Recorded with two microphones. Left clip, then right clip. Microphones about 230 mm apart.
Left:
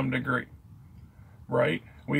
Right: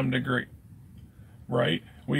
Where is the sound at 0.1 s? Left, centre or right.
Centre.